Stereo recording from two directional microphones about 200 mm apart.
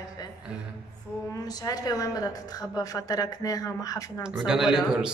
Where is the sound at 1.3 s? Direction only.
20° left (ahead or behind).